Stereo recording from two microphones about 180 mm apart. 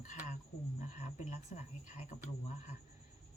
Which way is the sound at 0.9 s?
40° left (ahead or behind).